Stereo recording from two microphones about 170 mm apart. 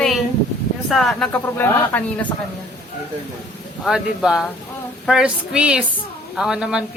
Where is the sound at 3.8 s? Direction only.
5° right (ahead or behind).